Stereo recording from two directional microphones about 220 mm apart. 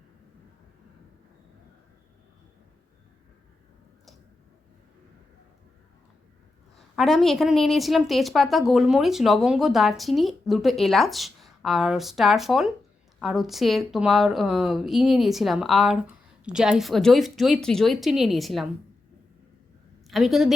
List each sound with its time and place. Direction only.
6.7 s a woman's voice: centre (ahead or behind)
20.1 s a woman's voice: centre (ahead or behind)